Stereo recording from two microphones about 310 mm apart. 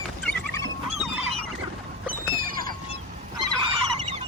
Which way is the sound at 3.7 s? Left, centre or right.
Centre.